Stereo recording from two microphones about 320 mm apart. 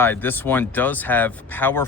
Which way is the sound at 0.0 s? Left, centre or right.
Centre.